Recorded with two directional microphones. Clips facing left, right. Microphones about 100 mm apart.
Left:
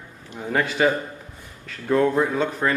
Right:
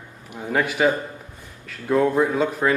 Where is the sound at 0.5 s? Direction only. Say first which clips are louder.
Right 1 dB; 5° right (ahead or behind).